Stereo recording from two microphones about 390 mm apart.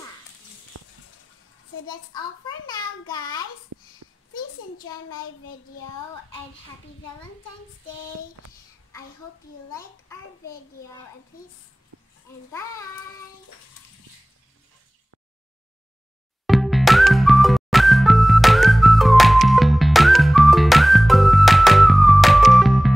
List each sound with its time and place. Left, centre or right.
0.7 s a sound: right
2.1 s a child's voice: centre
4.3 s a child's voice: left
16.4 s music: centre